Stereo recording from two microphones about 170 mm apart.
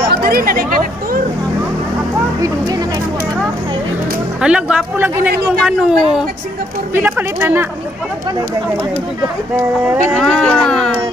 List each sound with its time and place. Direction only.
0.1 s speech: 65° right (ahead or behind)
4.4 s a woman's voice: 5° right (ahead or behind)
10.1 s speech: 5° left (ahead or behind)